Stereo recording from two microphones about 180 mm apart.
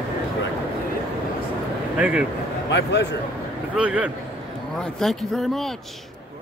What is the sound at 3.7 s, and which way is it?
Speech, 5° right (ahead or behind).